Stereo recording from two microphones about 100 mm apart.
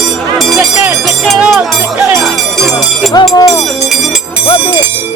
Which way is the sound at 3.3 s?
40° left (ahead or behind).